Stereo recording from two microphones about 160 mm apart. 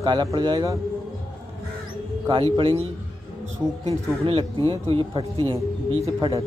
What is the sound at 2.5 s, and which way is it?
Speech, 35° right (ahead or behind).